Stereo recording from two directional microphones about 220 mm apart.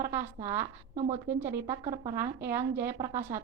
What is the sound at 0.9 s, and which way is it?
Speech, 30° right (ahead or behind).